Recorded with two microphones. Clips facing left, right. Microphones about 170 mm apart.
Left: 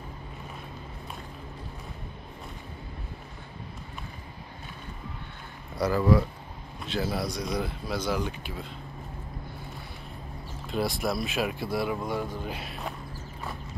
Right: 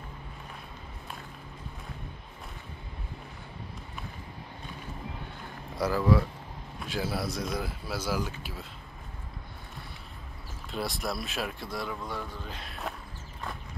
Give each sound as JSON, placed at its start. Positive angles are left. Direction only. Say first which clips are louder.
{"t": 5.8, "sound": "speech", "louder": "left 2 dB", "side_deg": -5}
{"t": 10.7, "sound": "speech", "louder": "left 5 dB", "side_deg": 0}
{"t": 11.9, "sound": "speech", "louder": "left 6 dB", "side_deg": 15}